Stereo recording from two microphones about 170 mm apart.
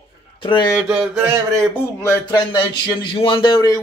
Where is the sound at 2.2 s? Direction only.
25° left (ahead or behind).